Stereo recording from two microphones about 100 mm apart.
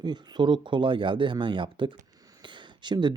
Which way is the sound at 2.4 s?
50° right (ahead or behind).